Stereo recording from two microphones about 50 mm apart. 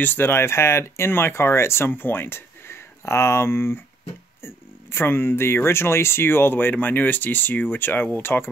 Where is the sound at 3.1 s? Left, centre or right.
Left.